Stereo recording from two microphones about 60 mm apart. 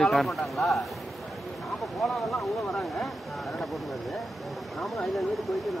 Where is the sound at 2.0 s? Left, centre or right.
Centre.